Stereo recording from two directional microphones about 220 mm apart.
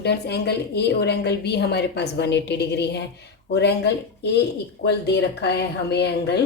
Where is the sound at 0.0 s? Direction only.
50° left (ahead or behind).